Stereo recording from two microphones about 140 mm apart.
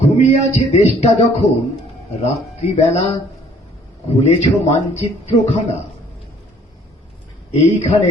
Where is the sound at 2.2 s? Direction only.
50° left (ahead or behind).